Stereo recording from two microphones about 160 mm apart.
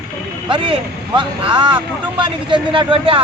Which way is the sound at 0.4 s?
30° right (ahead or behind).